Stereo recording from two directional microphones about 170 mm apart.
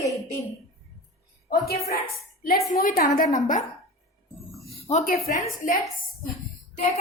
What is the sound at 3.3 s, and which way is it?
Speech, 50° left (ahead or behind).